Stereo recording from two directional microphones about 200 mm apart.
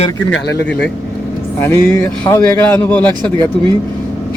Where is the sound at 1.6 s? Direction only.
10° left (ahead or behind).